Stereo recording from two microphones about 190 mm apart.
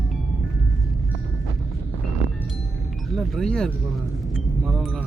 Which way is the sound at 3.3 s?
5° left (ahead or behind).